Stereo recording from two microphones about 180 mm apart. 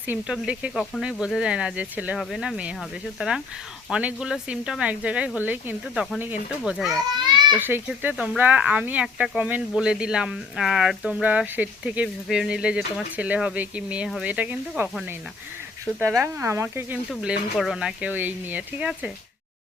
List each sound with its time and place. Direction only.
0.1 s speech: 5° right (ahead or behind)